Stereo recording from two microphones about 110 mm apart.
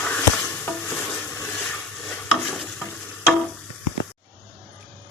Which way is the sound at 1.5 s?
5° left (ahead or behind).